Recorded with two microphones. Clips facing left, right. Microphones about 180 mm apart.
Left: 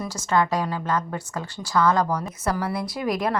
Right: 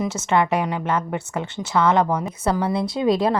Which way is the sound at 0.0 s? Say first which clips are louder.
Right 3 dB; 25° right (ahead or behind).